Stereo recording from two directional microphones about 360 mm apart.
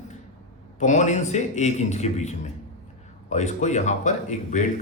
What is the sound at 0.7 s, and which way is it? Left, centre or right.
Speech, centre.